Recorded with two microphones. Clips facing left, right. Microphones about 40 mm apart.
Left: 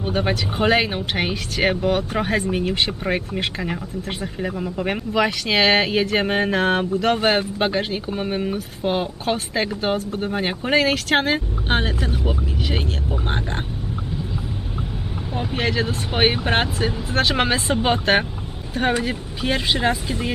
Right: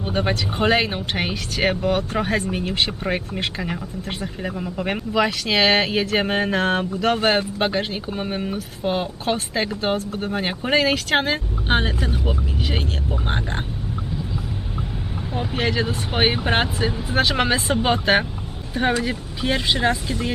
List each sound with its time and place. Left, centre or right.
0.0 s speech: centre
15.4 s speech: centre